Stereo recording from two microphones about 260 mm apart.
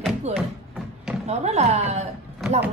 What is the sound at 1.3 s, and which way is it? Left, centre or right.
Speech, right.